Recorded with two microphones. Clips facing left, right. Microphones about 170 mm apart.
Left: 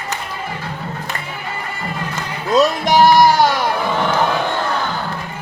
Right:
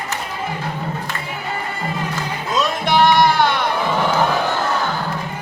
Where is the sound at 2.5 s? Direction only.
40° left (ahead or behind).